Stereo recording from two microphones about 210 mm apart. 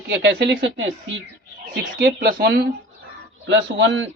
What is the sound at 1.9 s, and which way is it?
Speech, 45° right (ahead or behind).